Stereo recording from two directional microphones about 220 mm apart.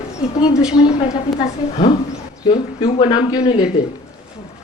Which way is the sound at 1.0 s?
25° left (ahead or behind).